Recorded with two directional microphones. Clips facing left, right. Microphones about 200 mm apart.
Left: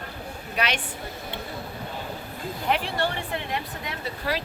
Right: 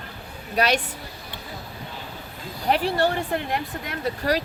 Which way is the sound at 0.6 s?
40° right (ahead or behind).